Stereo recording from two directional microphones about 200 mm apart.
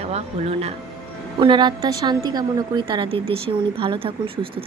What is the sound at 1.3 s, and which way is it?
A woman's voice, 25° right (ahead or behind).